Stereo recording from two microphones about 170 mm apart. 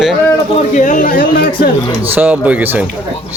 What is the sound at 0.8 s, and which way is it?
Speech, 50° left (ahead or behind).